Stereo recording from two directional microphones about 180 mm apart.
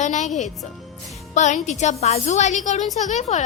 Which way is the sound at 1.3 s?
40° left (ahead or behind).